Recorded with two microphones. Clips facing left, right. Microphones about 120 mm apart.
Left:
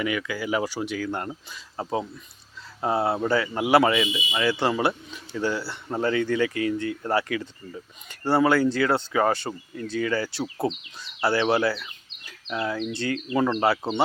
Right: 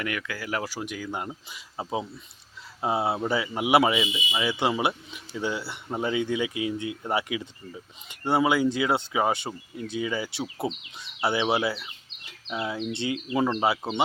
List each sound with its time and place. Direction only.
0.0 s speech: centre (ahead or behind)
1.5 s speech: 20° right (ahead or behind)
13.1 s speech: 15° right (ahead or behind)